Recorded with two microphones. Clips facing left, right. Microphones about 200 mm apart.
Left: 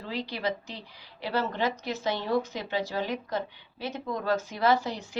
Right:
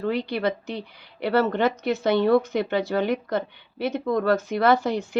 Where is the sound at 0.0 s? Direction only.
60° right (ahead or behind).